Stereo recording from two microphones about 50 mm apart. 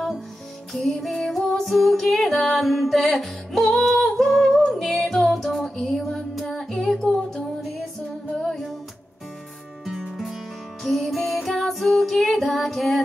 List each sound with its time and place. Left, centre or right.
0.7 s music: centre
8.4 s music: centre
9.8 s music: centre